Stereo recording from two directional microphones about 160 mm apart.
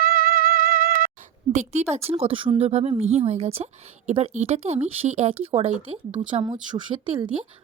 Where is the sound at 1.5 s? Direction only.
45° right (ahead or behind).